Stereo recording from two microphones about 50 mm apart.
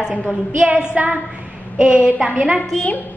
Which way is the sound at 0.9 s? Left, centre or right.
Right.